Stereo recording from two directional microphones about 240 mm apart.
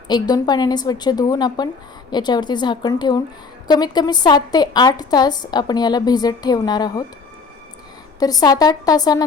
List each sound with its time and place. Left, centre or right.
0.1 s a woman's voice: centre
8.2 s a woman's voice: centre